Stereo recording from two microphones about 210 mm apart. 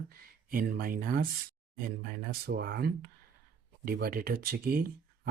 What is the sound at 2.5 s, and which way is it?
Speech, 50° right (ahead or behind).